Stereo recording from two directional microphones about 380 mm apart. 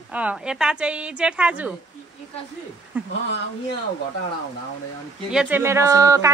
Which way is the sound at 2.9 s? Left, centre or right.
Centre.